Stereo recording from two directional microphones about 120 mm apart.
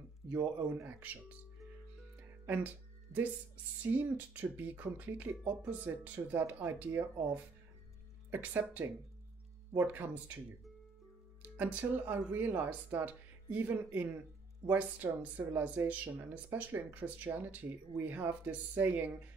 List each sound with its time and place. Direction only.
0.3 s speech: 20° right (ahead or behind)
2.4 s speech: 15° right (ahead or behind)
3.8 s speech: 15° right (ahead or behind)
8.3 s speech: 15° right (ahead or behind)
11.4 s speech: 15° right (ahead or behind)